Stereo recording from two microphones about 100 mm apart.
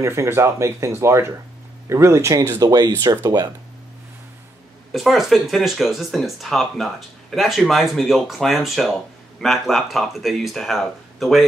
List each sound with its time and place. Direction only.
0.0 s speech: 30° right (ahead or behind)
4.9 s speech: centre (ahead or behind)